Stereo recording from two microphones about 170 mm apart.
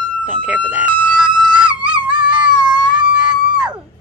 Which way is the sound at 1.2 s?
25° right (ahead or behind).